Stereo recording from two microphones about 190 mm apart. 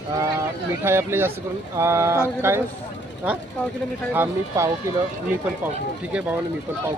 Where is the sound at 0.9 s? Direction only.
10° right (ahead or behind).